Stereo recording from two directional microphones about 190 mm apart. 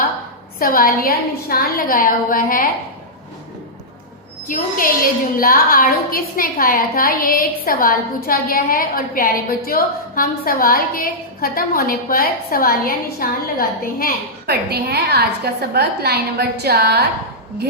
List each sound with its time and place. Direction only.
0.6 s a woman's voice: 50° left (ahead or behind)
4.4 s a woman's voice: 45° left (ahead or behind)
14.4 s a woman's voice: 55° right (ahead or behind)